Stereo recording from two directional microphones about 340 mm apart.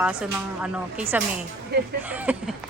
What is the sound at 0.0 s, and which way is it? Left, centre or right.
Speech, centre.